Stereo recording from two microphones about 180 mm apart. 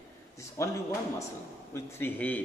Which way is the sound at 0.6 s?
15° left (ahead or behind).